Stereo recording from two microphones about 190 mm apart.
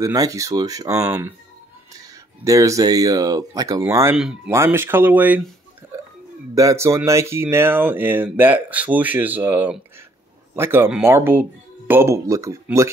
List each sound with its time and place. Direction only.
0.0 s speech: 20° right (ahead or behind)
6.5 s speech: 15° right (ahead or behind)